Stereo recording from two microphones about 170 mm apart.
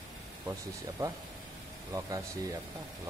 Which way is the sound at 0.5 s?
20° right (ahead or behind).